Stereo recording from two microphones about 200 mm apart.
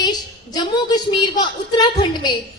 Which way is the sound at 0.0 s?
20° left (ahead or behind).